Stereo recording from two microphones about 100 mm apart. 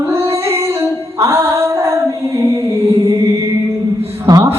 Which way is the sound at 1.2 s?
25° right (ahead or behind).